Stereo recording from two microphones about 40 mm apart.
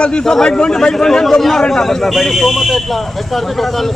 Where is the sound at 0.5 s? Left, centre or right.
Left.